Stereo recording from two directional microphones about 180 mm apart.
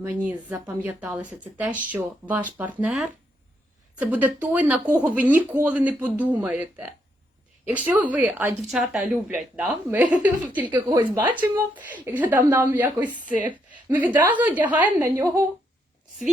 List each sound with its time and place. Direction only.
0.0 s speech: 10° right (ahead or behind)
10.8 s a woman's voice: 25° right (ahead or behind)
11.2 s speech: 10° right (ahead or behind)
14.3 s speech: 10° right (ahead or behind)